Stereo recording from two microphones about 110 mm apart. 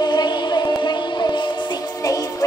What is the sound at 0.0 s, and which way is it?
Music, 40° left (ahead or behind).